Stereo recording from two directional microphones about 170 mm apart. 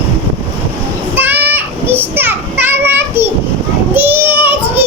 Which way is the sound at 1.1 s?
10° right (ahead or behind).